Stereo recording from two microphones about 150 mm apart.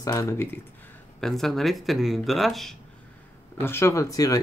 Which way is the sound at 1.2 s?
Centre (ahead or behind).